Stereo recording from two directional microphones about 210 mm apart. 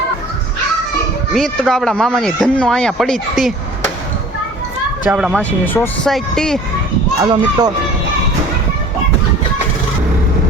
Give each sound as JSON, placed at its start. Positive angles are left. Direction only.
{"t": 1.3, "sound": "speech", "side_deg": 0}
{"t": 5.0, "sound": "speech", "side_deg": -5}
{"t": 7.2, "sound": "speech", "side_deg": -20}